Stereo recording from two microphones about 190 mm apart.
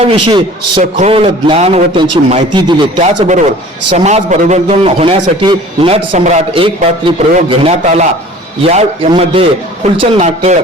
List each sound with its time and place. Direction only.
0.0 s a man's voice: 25° right (ahead or behind)
3.0 s a man's voice: 40° right (ahead or behind)